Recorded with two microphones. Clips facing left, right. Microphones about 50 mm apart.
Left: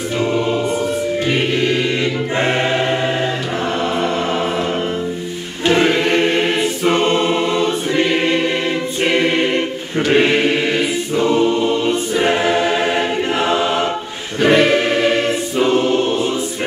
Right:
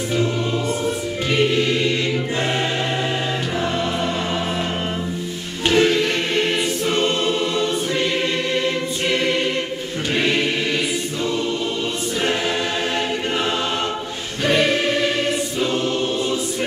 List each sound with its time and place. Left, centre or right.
1.3 s music: left
5.7 s choir: left
9.0 s choir: left
14.4 s choir: left